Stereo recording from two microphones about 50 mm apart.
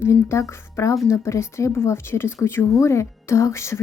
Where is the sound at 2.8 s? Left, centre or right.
Left.